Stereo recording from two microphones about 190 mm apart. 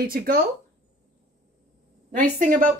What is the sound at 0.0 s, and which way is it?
Speech, 50° right (ahead or behind).